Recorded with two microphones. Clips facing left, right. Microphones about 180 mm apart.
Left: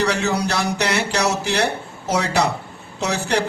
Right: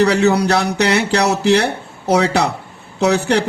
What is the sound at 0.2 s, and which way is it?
A man's voice, 65° right (ahead or behind).